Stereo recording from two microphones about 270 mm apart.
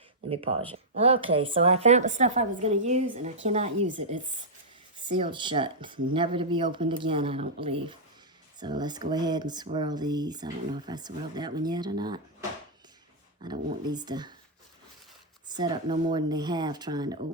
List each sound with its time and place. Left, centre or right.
0.7 s a woman's voice: right
4.9 s a woman's voice: centre
13.4 s speech: centre
15.4 s speech: centre